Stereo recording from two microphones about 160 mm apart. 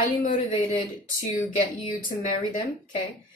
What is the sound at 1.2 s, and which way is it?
Speech, 60° left (ahead or behind).